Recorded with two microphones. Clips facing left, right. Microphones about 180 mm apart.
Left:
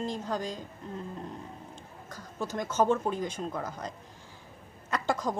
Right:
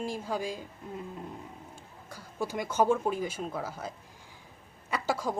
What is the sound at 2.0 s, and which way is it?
A woman's voice, 10° right (ahead or behind).